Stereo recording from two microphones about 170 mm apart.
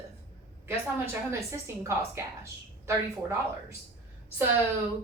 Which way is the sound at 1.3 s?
15° right (ahead or behind).